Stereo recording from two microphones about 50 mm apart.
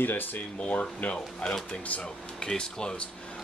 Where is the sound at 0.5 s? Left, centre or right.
Left.